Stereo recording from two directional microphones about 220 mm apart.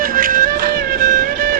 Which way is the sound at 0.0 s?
40° right (ahead or behind).